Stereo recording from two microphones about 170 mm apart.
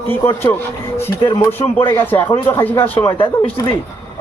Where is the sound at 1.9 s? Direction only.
10° left (ahead or behind).